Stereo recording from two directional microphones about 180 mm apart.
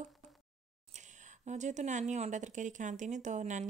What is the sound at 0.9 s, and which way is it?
Speech, 40° right (ahead or behind).